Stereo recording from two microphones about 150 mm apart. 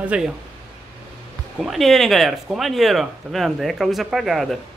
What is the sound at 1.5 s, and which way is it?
Speech, centre (ahead or behind).